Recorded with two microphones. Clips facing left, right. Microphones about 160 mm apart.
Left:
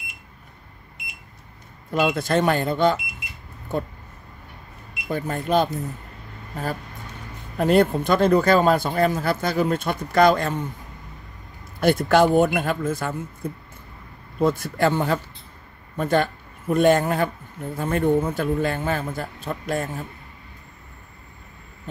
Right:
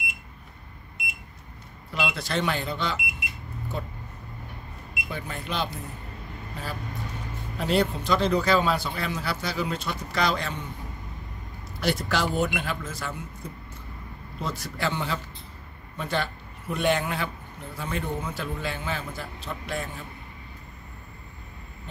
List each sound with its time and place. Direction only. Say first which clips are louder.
1.9 s speech: left 8 dB; 50° left (ahead or behind)
5.0 s speech: left 9 dB; 45° left (ahead or behind)
7.5 s speech: left 7 dB; 50° left (ahead or behind)
11.8 s speech: left 9 dB; 55° left (ahead or behind)